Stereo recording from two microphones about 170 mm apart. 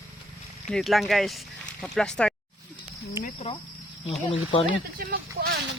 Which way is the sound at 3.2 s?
15° right (ahead or behind).